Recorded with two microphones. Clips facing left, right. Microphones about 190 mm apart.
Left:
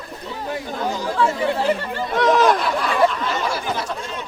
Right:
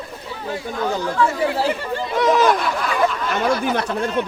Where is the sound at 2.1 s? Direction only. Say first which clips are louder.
Even; centre (ahead or behind).